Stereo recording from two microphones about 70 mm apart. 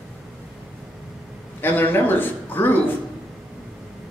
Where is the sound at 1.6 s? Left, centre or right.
Left.